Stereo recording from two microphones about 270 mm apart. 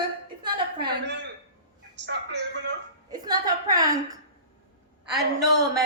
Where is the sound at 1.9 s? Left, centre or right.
Right.